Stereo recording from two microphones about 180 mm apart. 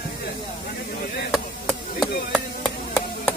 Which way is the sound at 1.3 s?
5° right (ahead or behind).